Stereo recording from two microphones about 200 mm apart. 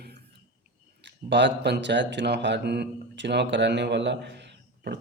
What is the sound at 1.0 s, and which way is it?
Speech, 60° right (ahead or behind).